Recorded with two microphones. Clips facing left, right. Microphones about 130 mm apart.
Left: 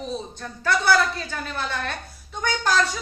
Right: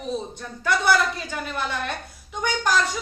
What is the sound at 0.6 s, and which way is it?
Speech, 15° right (ahead or behind).